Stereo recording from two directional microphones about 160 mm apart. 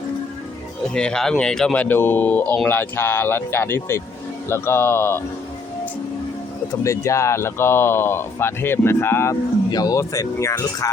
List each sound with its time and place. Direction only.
0.9 s speech: 5° left (ahead or behind)
6.8 s speech: 20° left (ahead or behind)